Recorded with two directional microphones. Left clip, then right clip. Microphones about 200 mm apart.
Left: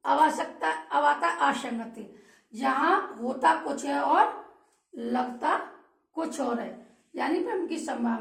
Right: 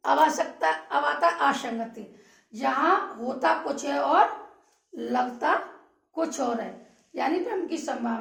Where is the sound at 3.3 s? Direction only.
25° right (ahead or behind).